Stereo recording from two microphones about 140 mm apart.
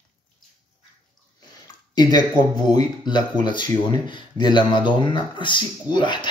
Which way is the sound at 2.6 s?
30° left (ahead or behind).